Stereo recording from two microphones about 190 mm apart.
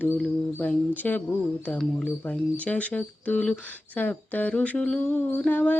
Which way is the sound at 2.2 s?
10° left (ahead or behind).